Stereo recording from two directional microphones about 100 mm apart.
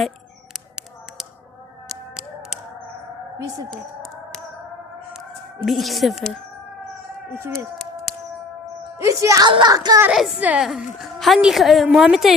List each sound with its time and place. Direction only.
3.7 s a sound: 5° left (ahead or behind)
5.6 s a woman's voice: centre (ahead or behind)
9.0 s speech: 30° right (ahead or behind)
9.5 s speech: 55° right (ahead or behind)
9.7 s speech: 40° right (ahead or behind)
10.1 s a woman's voice: 5° right (ahead or behind)
10.4 s speech: 15° right (ahead or behind)
10.7 s a woman's voice: centre (ahead or behind)